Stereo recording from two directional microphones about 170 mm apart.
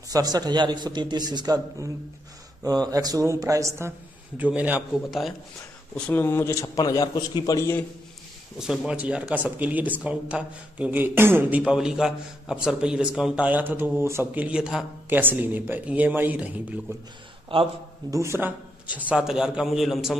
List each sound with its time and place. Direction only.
0.1 s a man's voice: 25° right (ahead or behind); by 5.3 s 5° right (ahead or behind)
5.9 s a man's voice: 10° left (ahead or behind)
8.5 s speech: 5° right (ahead or behind)
17.5 s speech: 30° right (ahead or behind)
18.1 s a man's voice: 15° right (ahead or behind)